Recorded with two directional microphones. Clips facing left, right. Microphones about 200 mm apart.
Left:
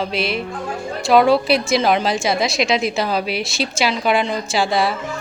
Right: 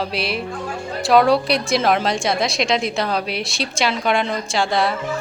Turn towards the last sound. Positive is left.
turn(degrees=5)  # may be behind; listen again after turning